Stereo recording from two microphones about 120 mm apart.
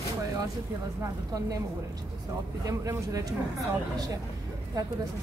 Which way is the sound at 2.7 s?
30° right (ahead or behind).